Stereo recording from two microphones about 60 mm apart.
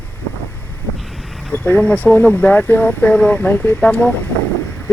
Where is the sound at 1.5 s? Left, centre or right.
Left.